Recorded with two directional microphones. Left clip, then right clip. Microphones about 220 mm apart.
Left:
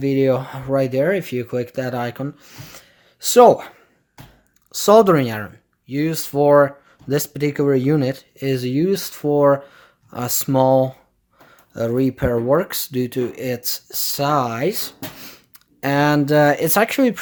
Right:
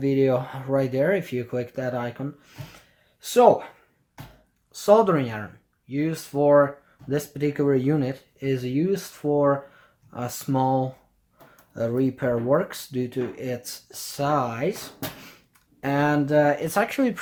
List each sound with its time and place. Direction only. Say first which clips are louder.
0.0 s speech: left 4 dB; 25° left (ahead or behind)
4.7 s speech: left 6 dB; 40° left (ahead or behind)